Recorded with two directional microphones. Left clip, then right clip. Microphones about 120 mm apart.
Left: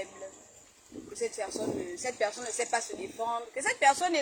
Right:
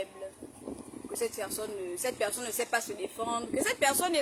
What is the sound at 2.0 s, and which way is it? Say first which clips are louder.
Speech: even; 20° right (ahead or behind).